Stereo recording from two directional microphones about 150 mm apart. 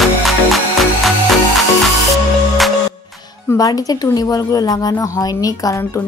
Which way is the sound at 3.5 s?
25° left (ahead or behind).